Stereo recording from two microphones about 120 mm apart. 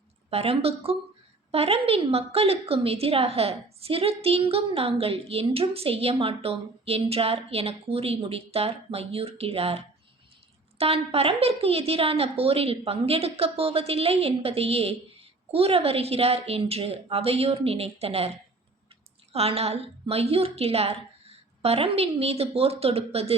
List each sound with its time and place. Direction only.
0.3 s a woman's voice: 55° right (ahead or behind)
19.3 s a woman's voice: 60° right (ahead or behind)